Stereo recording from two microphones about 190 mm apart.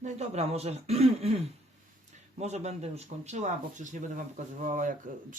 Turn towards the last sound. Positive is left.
turn(degrees=-45)  # may be behind; listen again after turning